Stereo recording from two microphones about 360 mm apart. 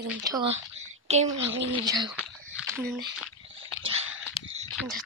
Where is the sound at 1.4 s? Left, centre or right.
Right.